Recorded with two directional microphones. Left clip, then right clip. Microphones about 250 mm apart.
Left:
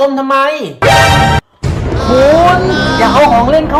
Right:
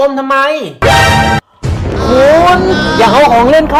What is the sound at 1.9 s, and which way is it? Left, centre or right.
Music, centre.